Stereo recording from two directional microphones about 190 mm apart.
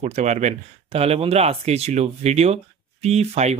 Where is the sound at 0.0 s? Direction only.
35° right (ahead or behind).